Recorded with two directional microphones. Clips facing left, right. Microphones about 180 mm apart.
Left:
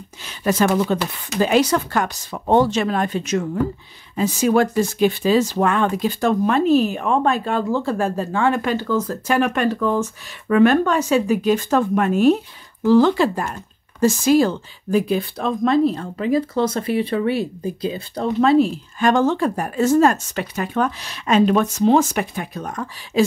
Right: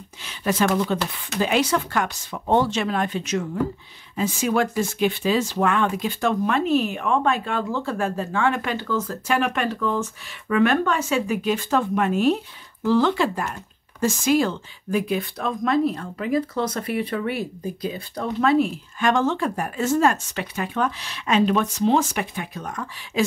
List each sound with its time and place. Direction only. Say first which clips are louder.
0.2 s speech: left 3 dB; 40° left (ahead or behind)